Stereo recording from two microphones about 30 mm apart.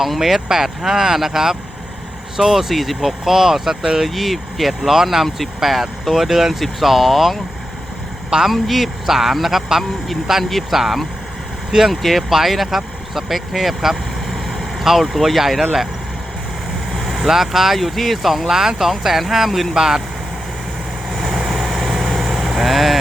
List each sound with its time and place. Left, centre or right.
0.2 s speech: centre
3.2 s speech: centre
4.0 s speech: centre
8.4 s speech: centre
13.5 s vehicle: centre
14.8 s speech: centre
16.9 s vehicle: centre
17.2 s speech: centre
17.7 s speech: centre
19.7 s speech: centre
21.1 s vehicle: centre